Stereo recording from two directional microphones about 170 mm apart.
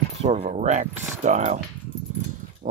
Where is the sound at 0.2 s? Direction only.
40° right (ahead or behind).